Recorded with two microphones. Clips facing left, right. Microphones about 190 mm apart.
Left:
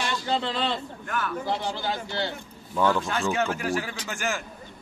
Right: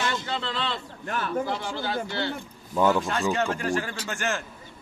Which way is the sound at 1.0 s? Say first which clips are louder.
Right 1 dB; 30° right (ahead or behind).